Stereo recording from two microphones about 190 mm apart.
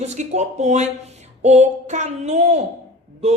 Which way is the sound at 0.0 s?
35° right (ahead or behind).